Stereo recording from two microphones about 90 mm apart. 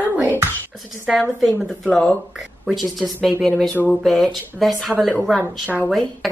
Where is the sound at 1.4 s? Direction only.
5° right (ahead or behind).